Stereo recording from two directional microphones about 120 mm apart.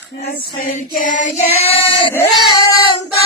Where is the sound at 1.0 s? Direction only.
90° left.